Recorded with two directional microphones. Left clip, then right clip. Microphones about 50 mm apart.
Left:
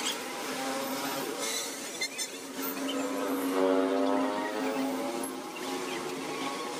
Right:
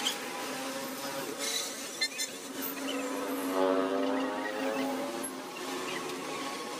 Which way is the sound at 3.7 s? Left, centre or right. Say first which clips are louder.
Left 2 dB; centre.